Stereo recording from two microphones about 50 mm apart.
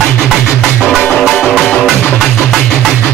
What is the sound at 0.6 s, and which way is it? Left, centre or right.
Music, centre.